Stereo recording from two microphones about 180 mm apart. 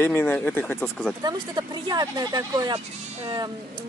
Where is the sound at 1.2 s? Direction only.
25° right (ahead or behind).